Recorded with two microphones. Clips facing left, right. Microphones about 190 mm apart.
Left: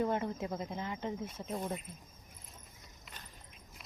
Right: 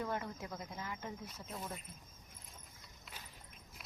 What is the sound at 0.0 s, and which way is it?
Speech, 20° left (ahead or behind).